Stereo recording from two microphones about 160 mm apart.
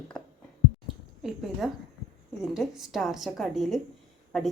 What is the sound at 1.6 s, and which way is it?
Speech, 5° right (ahead or behind).